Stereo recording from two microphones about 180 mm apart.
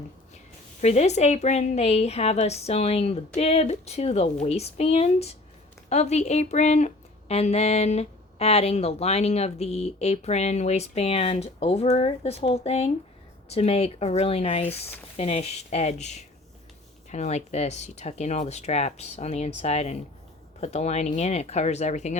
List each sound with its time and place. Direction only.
0.8 s speech: 40° left (ahead or behind)